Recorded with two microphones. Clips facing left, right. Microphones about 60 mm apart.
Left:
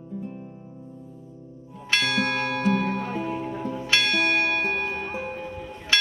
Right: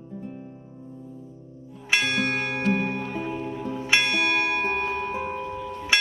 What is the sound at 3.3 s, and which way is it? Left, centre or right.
Music, left.